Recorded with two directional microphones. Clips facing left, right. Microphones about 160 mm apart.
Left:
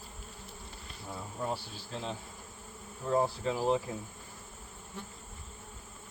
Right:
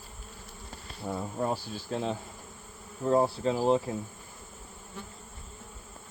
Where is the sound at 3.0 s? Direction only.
35° right (ahead or behind).